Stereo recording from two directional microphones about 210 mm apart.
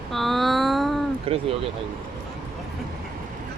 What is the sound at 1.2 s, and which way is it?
Speech, 30° right (ahead or behind).